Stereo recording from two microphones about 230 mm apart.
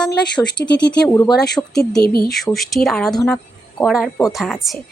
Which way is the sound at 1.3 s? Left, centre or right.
Centre.